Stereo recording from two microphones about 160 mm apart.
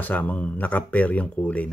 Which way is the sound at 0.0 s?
10° left (ahead or behind).